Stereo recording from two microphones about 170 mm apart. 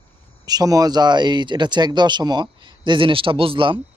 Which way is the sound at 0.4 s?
20° right (ahead or behind).